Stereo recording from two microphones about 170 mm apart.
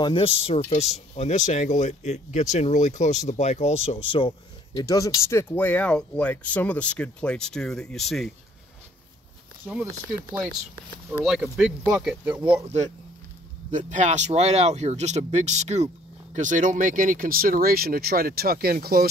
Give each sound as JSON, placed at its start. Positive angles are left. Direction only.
{"t": 0.0, "sound": "speech", "side_deg": 30}
{"t": 4.7, "sound": "speech", "side_deg": 20}
{"t": 9.6, "sound": "speech", "side_deg": -5}
{"t": 11.2, "sound": "speech", "side_deg": -5}
{"t": 12.6, "sound": "speech", "side_deg": -40}